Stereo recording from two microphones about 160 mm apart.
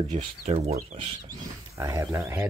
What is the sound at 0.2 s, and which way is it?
Speech, 40° right (ahead or behind).